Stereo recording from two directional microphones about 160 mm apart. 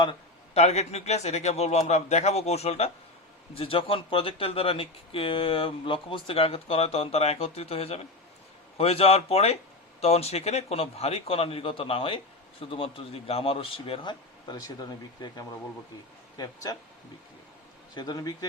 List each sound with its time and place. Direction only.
0.5 s a man's voice: 45° left (ahead or behind); by 15.4 s 25° left (ahead or behind)
17.9 s a man's voice: 25° left (ahead or behind)